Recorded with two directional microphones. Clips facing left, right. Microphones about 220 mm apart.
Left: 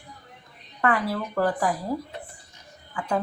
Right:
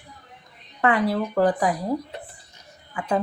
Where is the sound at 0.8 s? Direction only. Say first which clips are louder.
Right 4 dB; 20° right (ahead or behind).